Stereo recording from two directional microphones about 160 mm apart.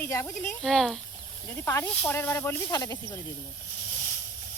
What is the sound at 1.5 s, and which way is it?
Speech, 15° left (ahead or behind).